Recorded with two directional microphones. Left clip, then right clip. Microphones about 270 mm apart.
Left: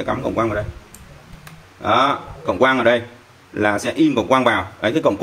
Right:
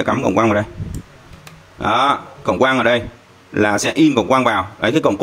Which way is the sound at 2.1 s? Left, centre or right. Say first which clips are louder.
Right 4 dB; right.